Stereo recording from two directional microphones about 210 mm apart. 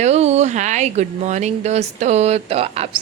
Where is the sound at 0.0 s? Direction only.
30° right (ahead or behind).